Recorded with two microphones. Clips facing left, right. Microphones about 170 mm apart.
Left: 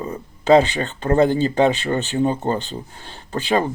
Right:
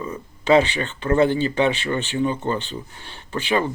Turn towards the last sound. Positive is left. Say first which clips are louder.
# left 2 dB
turn(degrees=35)  # may be behind; listen again after turning